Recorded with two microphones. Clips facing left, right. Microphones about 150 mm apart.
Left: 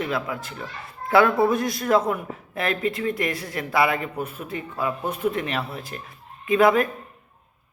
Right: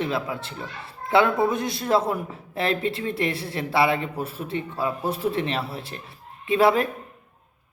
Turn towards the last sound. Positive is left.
turn(degrees=-30)  # may be behind; listen again after turning